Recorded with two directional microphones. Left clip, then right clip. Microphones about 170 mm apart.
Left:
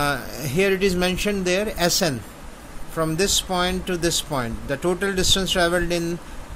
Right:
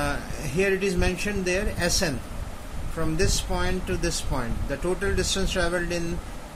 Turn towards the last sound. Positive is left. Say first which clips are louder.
# left 5 dB
turn(degrees=50)  # may be behind; listen again after turning